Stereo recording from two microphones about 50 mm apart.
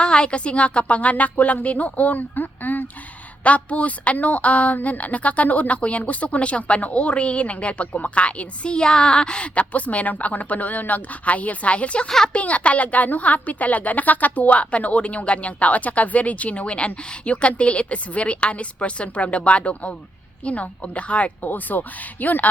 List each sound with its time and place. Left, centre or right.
0.0 s a woman's voice: centre
12.0 s speech: centre
12.3 s a woman's voice: left
21.4 s speech: left